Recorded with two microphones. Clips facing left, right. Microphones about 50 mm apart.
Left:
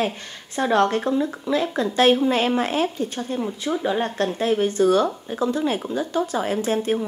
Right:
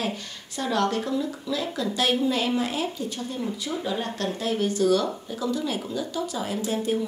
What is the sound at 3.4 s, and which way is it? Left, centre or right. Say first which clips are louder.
A woman's voice: left 5 dB; left.